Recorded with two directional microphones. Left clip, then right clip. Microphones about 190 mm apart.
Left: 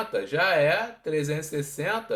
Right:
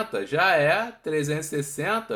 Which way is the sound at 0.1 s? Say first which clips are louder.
Right 2 dB; 40° right (ahead or behind).